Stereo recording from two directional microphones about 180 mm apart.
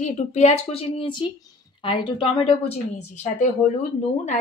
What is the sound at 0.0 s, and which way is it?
A woman's voice, 40° left (ahead or behind).